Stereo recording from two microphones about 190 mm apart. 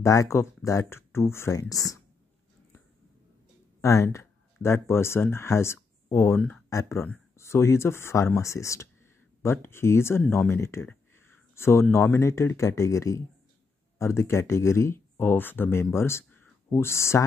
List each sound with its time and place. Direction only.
0.0 s speech: 15° left (ahead or behind)
3.8 s speech: 15° left (ahead or behind)